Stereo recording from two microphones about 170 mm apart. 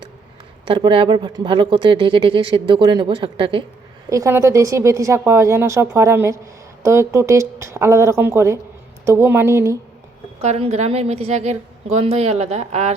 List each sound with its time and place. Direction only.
0.6 s speech: 30° right (ahead or behind)
4.1 s speech: 15° right (ahead or behind)
10.4 s a woman's voice: 40° right (ahead or behind)